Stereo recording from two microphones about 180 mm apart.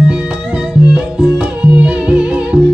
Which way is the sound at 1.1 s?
5° right (ahead or behind).